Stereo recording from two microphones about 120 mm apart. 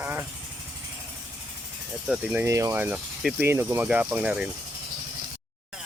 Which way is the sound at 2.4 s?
25° right (ahead or behind).